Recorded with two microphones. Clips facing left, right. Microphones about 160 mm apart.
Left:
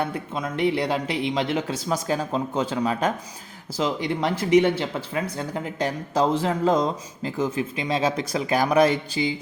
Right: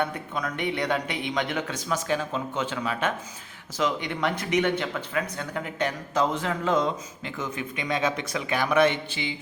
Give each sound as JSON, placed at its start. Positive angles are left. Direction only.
{"t": 0.0, "sound": "speech", "side_deg": 30}